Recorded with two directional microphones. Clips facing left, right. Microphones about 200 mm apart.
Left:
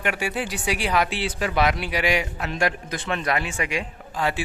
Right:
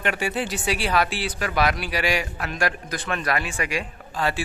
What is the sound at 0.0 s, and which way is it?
Speech, 10° left (ahead or behind).